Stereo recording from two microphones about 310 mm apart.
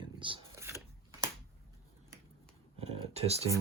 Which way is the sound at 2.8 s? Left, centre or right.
Centre.